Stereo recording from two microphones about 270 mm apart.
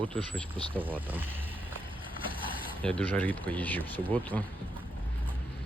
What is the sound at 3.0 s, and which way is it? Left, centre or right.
Speech, centre.